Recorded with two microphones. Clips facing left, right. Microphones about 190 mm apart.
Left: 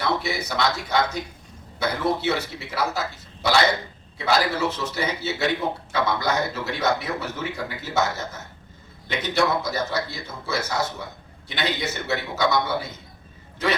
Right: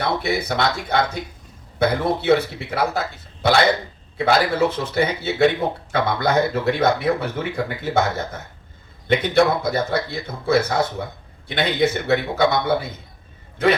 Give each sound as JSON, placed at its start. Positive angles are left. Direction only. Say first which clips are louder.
{"t": 0.2, "sound": "a man's voice", "louder": "right 4 dB", "side_deg": -55}